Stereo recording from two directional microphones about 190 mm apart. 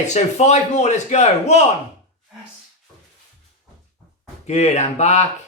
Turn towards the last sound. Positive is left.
turn(degrees=35)  # may be behind; listen again after turning